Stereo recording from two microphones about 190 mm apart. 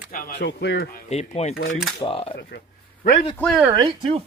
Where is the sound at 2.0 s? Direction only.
30° left (ahead or behind).